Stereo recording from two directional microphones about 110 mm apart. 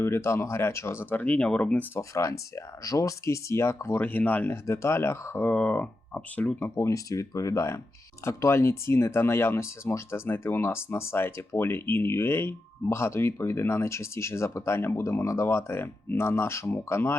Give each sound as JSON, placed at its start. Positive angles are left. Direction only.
{"t": 0.0, "sound": "speech", "side_deg": 25}
{"t": 2.0, "sound": "speech", "side_deg": 25}
{"t": 5.5, "sound": "speech", "side_deg": 10}
{"t": 6.7, "sound": "speech", "side_deg": 30}